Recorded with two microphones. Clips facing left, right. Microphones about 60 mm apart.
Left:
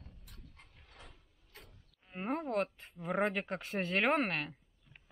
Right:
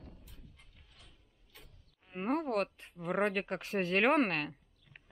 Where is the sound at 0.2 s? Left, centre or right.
Left.